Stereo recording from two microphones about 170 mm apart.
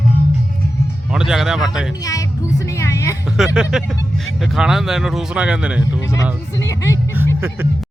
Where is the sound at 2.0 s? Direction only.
20° left (ahead or behind).